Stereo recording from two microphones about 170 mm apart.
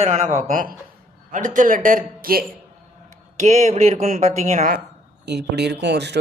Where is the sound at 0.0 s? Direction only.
45° right (ahead or behind).